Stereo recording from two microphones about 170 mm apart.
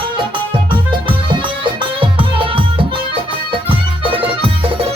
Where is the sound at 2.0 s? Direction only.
30° right (ahead or behind).